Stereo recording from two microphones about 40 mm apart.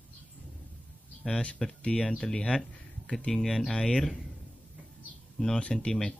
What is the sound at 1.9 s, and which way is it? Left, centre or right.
Speech, centre.